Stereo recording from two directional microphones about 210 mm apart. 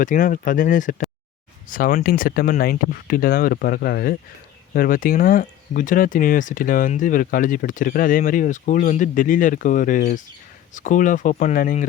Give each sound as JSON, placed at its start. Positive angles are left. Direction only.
{"t": 0.0, "sound": "speech", "side_deg": 40}